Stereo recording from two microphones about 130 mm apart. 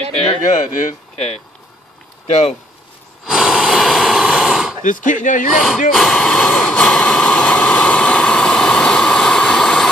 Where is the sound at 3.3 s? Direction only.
Centre (ahead or behind).